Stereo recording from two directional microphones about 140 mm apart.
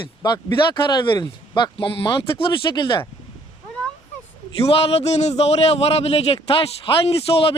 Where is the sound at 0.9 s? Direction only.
35° left (ahead or behind).